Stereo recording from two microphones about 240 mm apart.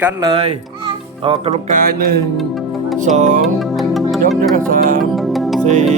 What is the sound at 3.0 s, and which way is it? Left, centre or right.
Music, right.